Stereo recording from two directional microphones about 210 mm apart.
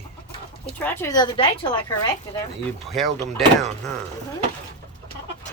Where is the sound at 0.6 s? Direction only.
10° left (ahead or behind).